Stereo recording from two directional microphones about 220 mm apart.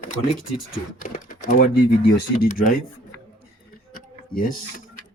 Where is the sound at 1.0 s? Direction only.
40° left (ahead or behind).